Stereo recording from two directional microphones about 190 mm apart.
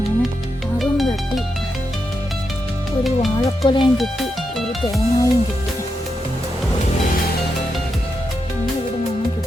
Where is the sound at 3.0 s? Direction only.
Centre (ahead or behind).